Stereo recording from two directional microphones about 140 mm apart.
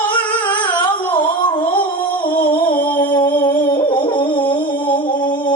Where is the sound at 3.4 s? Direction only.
35° left (ahead or behind).